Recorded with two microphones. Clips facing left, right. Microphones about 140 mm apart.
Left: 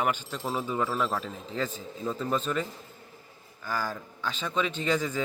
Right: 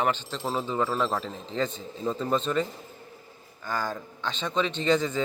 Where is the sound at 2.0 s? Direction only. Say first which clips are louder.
Right 3 dB; 25° right (ahead or behind).